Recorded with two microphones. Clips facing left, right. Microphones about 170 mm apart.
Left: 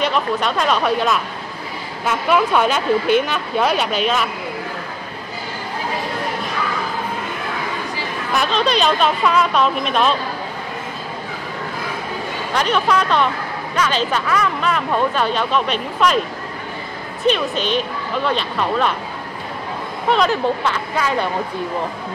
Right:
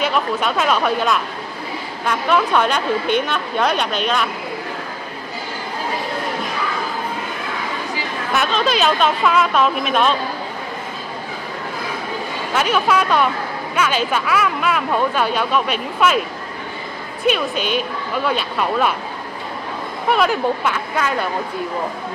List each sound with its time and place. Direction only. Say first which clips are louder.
0.0 s speech: even; 5° right (ahead or behind)
8.3 s speech: even; centre (ahead or behind)
12.5 s speech: even; 5° right (ahead or behind)
17.3 s speech: left 1 dB; 10° right (ahead or behind)
20.1 s speech: even; 10° right (ahead or behind)